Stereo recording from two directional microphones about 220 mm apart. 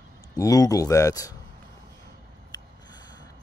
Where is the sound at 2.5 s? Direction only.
20° left (ahead or behind).